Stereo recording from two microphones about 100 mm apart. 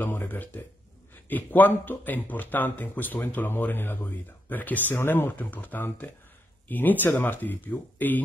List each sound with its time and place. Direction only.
0.0 s speech: 20° left (ahead or behind)